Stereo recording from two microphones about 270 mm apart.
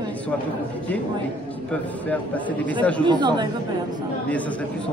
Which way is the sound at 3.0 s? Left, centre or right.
Centre.